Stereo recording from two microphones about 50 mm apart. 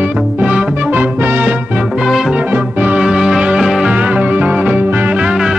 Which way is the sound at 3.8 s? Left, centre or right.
Right.